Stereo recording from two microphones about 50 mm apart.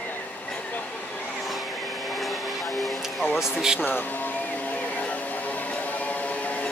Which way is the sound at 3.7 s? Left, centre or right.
Left.